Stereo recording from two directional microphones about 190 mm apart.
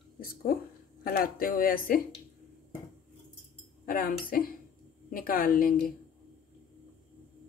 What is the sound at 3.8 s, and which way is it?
A woman's voice, 50° left (ahead or behind).